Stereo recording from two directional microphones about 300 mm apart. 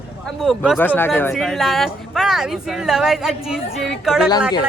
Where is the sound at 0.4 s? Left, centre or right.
Centre.